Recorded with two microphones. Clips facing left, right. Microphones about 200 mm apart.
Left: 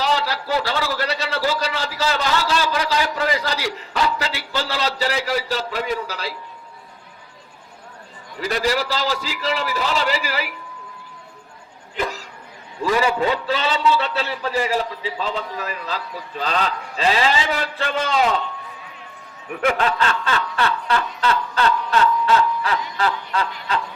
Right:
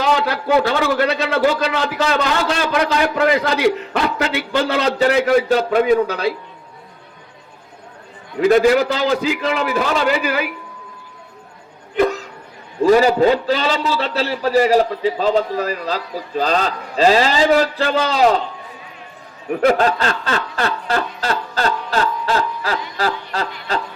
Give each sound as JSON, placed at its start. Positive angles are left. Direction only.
{"t": 0.0, "sound": "a man's voice", "side_deg": -55}
{"t": 8.4, "sound": "a man's voice", "side_deg": -50}
{"t": 11.9, "sound": "speech", "side_deg": -60}
{"t": 12.8, "sound": "a man's voice", "side_deg": -40}
{"t": 19.5, "sound": "speech", "side_deg": -35}